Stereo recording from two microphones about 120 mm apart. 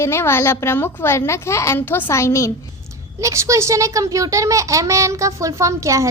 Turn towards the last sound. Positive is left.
turn(degrees=-25)  # may be behind; listen again after turning